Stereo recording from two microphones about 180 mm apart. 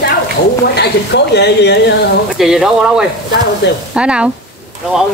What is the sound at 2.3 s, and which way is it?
Speech, centre (ahead or behind).